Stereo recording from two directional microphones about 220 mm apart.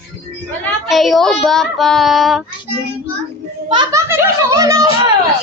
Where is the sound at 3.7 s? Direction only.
20° right (ahead or behind).